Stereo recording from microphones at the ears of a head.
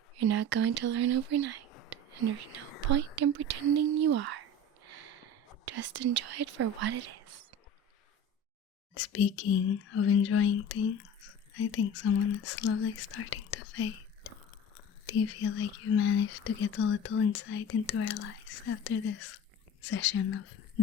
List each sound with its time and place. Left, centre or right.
0.2 s speech: right
3.2 s whispering: right
5.6 s speech: right
9.0 s speech: left